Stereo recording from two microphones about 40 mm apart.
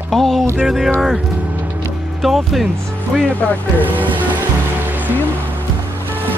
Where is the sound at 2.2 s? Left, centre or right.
Centre.